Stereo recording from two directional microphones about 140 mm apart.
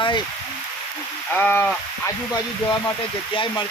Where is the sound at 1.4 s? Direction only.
15° left (ahead or behind).